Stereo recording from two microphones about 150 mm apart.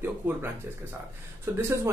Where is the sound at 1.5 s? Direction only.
15° right (ahead or behind).